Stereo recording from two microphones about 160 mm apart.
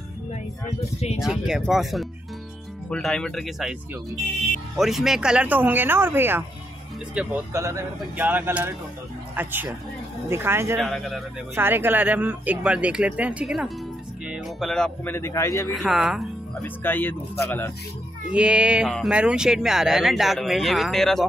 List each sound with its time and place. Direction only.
1.2 s speech: 5° right (ahead or behind)
4.7 s speech: centre (ahead or behind)
7.5 s speech: 20° right (ahead or behind)
10.8 s speech: centre (ahead or behind)
11.5 s speech: 15° right (ahead or behind); by 15.1 s 5° left (ahead or behind)
15.1 s speech: 15° left (ahead or behind)
15.7 s speech: 5° right (ahead or behind)
16.6 s speech: 10° left (ahead or behind)
18.3 s speech: 5° right (ahead or behind)